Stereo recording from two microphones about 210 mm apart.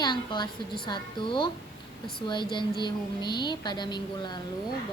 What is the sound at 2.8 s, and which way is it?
A woman's voice, 20° left (ahead or behind).